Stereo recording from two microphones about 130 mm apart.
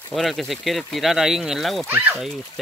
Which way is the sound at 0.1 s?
Centre (ahead or behind).